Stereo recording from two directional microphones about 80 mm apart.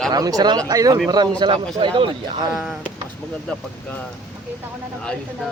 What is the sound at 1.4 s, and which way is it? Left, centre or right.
Speech, right.